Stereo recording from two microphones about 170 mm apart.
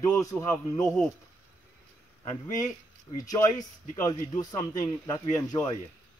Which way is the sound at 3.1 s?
20° left (ahead or behind).